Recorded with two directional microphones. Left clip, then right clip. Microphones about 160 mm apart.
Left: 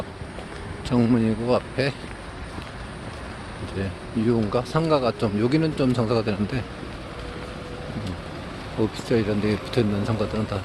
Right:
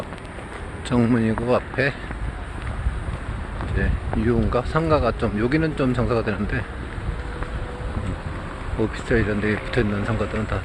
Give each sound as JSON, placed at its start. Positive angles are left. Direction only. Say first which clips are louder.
{"t": 0.9, "sound": "speech", "louder": "right 1 dB", "side_deg": 10}
{"t": 4.3, "sound": "speech", "louder": "right 1 dB", "side_deg": 10}
{"t": 9.0, "sound": "speech", "louder": "right 2 dB", "side_deg": 15}